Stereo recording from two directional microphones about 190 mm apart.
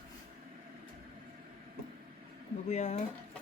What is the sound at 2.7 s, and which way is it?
Speech, 40° left (ahead or behind).